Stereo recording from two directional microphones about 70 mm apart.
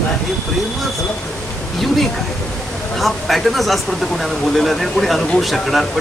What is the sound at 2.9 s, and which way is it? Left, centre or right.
Speech, centre.